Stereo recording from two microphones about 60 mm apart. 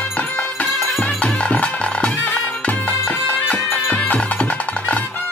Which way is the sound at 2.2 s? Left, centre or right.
Left.